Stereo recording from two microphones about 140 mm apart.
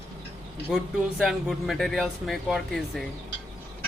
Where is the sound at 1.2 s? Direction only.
Centre (ahead or behind).